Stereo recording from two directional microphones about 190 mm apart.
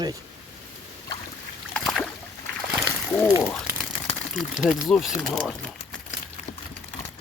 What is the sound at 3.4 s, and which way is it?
Crumpling, 5° left (ahead or behind).